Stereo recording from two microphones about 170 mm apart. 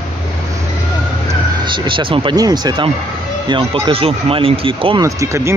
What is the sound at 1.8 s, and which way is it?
Speech, 30° right (ahead or behind).